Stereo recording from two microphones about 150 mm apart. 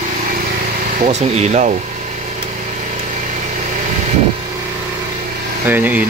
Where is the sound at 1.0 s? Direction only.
50° right (ahead or behind).